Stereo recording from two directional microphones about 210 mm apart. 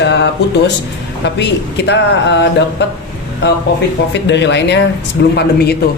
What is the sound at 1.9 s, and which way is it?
Speech, 55° left (ahead or behind).